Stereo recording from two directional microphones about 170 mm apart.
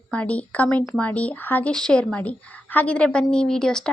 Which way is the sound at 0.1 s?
5° left (ahead or behind).